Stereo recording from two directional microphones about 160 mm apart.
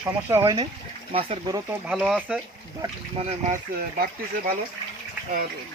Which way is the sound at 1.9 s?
5° right (ahead or behind).